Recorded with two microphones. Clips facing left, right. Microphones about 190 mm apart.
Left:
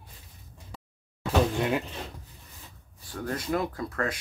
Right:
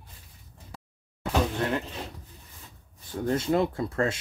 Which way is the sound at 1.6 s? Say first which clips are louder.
Left 1 dB; 10° left (ahead or behind).